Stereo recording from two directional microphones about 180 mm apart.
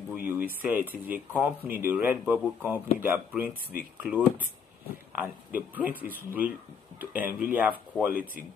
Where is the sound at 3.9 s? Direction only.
10° right (ahead or behind).